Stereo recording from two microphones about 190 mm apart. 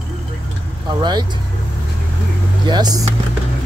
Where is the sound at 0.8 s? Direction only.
25° right (ahead or behind).